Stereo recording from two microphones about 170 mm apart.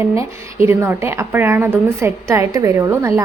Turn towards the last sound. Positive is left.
turn(degrees=-15)  # may be behind; listen again after turning